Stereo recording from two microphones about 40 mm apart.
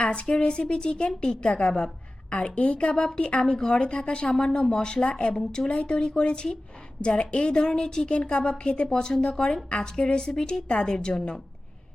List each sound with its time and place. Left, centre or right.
0.0 s a woman's voice: left